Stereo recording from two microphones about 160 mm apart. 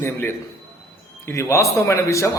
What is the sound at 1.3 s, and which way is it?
A man's voice, 20° left (ahead or behind).